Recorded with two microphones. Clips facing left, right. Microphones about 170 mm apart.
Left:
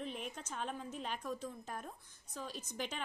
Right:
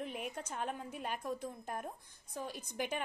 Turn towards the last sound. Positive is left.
turn(degrees=-10)  # may be behind; listen again after turning